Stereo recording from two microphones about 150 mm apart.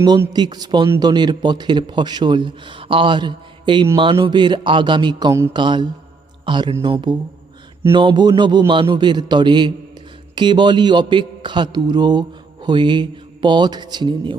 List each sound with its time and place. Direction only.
0.3 s a man's voice: 30° right (ahead or behind)